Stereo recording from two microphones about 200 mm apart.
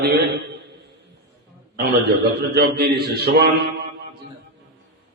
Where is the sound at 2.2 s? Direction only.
55° right (ahead or behind).